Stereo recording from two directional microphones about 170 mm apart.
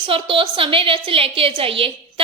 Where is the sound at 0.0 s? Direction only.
30° right (ahead or behind).